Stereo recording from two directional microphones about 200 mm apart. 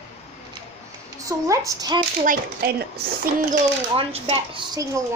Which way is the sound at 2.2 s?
45° right (ahead or behind).